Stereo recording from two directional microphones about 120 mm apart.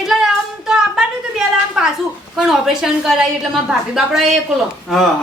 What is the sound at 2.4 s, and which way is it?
A man's voice, 5° right (ahead or behind).